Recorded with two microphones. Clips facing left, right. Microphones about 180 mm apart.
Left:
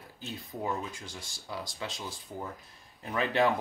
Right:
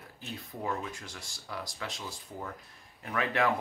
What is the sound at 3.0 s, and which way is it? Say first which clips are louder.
Speech: left 1 dB; 25° left (ahead or behind).